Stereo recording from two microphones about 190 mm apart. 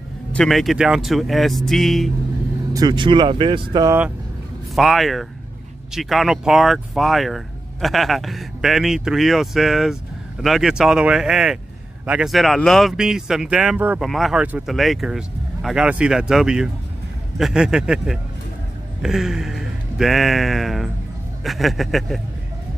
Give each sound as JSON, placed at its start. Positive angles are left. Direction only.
{"t": 0.3, "sound": "speech", "side_deg": 0}
{"t": 2.7, "sound": "speech", "side_deg": -20}
{"t": 4.7, "sound": "speech", "side_deg": 0}